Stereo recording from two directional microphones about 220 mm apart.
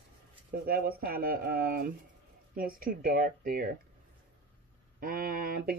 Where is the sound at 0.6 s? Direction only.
45° right (ahead or behind).